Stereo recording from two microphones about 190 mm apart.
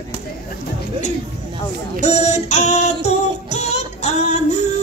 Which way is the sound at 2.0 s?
35° left (ahead or behind).